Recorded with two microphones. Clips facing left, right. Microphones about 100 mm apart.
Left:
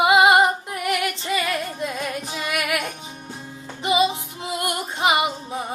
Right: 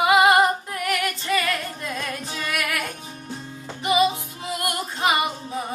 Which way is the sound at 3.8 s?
25° left (ahead or behind).